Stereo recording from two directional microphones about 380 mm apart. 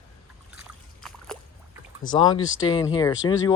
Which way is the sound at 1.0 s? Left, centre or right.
Centre.